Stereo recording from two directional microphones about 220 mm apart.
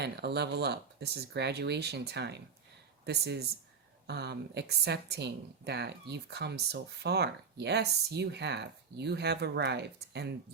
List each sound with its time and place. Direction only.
0.0 s a woman's voice: 50° right (ahead or behind)
4.0 s a woman's voice: 50° right (ahead or behind)